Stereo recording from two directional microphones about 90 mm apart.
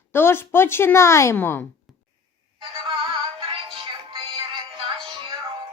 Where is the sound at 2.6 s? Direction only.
90° right; by 5.3 s 70° right (ahead or behind).